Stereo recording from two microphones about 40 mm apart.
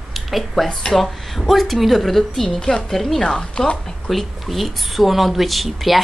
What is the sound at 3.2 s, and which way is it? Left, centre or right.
Speech, left.